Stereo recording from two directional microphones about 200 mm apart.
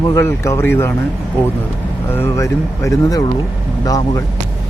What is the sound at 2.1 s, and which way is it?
Speech, 15° left (ahead or behind).